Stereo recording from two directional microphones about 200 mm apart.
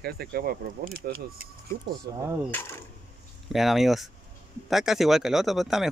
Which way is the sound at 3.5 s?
Centre (ahead or behind).